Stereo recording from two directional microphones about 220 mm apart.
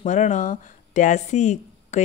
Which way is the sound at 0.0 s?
35° left (ahead or behind).